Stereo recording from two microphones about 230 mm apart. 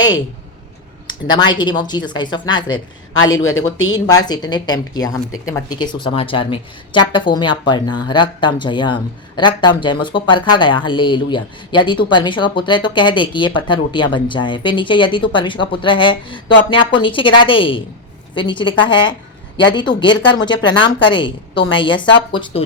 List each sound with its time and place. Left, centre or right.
1.3 s speech: centre
3.2 s speech: left
3.9 s a woman's voice: centre